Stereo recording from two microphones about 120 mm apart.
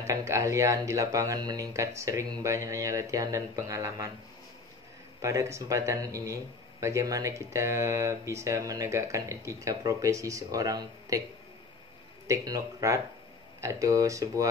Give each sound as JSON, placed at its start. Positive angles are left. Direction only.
{"t": 0.0, "sound": "speech", "side_deg": -25}
{"t": 5.2, "sound": "speech", "side_deg": -25}
{"t": 12.3, "sound": "speech", "side_deg": -30}